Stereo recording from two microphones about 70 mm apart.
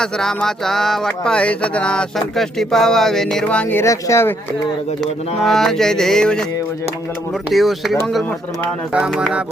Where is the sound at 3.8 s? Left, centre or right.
Left.